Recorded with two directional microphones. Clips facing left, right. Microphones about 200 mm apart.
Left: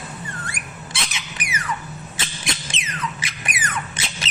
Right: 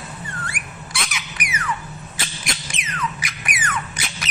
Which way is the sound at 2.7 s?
25° left (ahead or behind).